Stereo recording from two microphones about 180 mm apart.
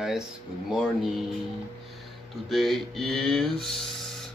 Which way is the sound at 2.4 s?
Centre (ahead or behind).